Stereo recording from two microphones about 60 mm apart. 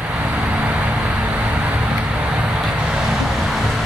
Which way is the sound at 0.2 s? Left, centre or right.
Right.